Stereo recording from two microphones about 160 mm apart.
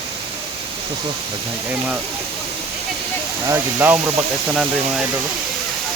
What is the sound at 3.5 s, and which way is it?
Speech, 15° right (ahead or behind).